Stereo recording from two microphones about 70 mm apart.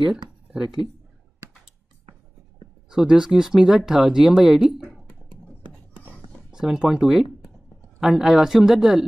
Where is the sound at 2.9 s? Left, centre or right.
Centre.